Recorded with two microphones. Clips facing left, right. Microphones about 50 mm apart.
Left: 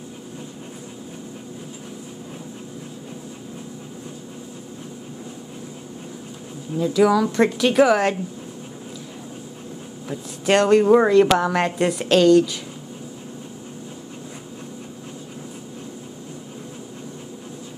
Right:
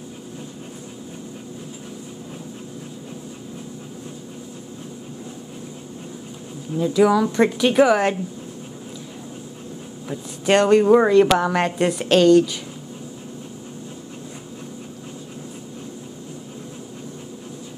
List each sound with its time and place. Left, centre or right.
7.0 s a woman's voice: centre
10.0 s speech: centre